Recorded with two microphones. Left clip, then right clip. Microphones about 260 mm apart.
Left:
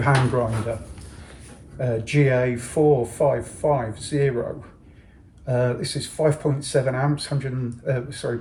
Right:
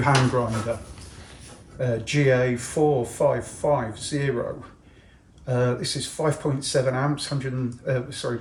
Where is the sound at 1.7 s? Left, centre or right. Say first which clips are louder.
Left 2 dB; centre.